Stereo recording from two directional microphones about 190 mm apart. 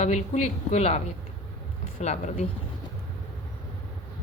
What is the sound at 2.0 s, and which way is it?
Speech, 35° left (ahead or behind).